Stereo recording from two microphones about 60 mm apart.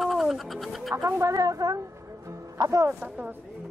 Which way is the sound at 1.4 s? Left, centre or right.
Right.